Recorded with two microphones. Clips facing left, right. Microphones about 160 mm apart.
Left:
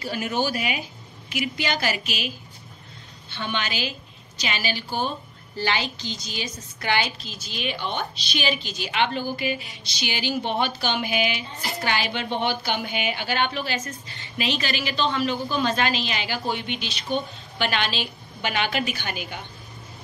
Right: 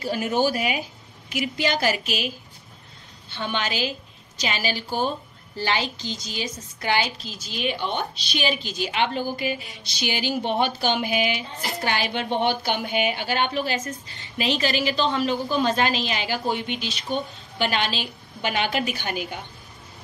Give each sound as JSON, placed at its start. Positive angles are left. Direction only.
{"t": 0.0, "sound": "a woman's voice", "side_deg": -40}
{"t": 3.4, "sound": "a woman's voice", "side_deg": -40}